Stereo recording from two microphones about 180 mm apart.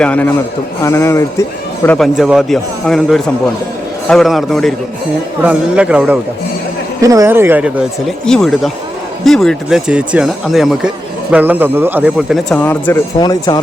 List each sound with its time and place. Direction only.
0.0 s speech: 10° left (ahead or behind)
2.0 s speech: centre (ahead or behind)
7.0 s speech: 20° right (ahead or behind); by 12.5 s 5° right (ahead or behind)
12.5 s speech: 10° left (ahead or behind)
13.1 s speech: 25° left (ahead or behind)